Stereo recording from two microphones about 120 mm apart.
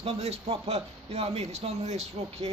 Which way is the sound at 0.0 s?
60° right (ahead or behind).